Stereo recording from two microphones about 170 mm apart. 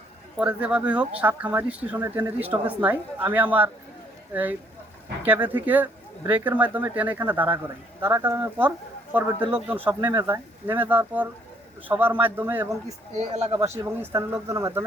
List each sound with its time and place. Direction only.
0.3 s speech: 5° right (ahead or behind)
5.2 s speech: 10° right (ahead or behind)
13.1 s speech: 40° right (ahead or behind)
13.5 s speech: 20° right (ahead or behind)